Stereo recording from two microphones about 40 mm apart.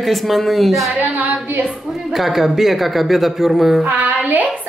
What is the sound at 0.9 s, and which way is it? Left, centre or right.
Speech, right.